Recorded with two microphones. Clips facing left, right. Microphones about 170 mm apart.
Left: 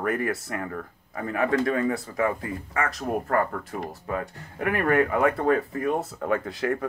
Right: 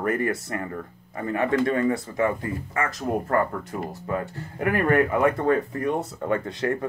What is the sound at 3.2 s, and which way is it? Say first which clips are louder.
Speech: right 1 dB; 20° right (ahead or behind).